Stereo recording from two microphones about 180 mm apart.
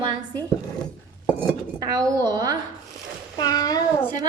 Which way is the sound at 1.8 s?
20° right (ahead or behind).